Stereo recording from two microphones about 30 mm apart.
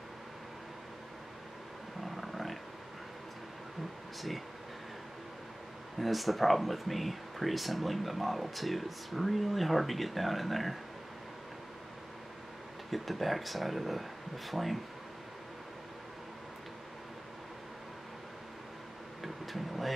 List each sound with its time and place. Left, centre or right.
2.0 s wild animals: centre
5.9 s speech: centre
12.9 s speech: centre
19.2 s speech: centre